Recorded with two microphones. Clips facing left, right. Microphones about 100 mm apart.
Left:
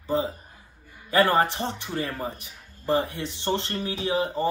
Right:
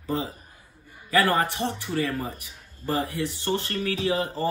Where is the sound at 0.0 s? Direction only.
30° left (ahead or behind).